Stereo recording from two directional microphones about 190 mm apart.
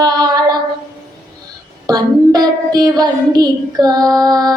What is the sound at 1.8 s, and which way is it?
Child singing, 20° right (ahead or behind).